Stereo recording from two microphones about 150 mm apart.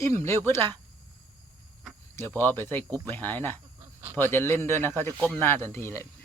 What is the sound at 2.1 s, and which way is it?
A man's voice, 15° left (ahead or behind).